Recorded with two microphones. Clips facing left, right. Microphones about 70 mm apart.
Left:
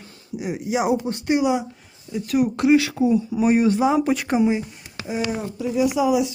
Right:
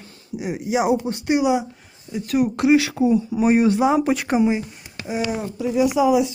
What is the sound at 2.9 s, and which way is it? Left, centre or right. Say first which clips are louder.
Speech: right 1 dB; right.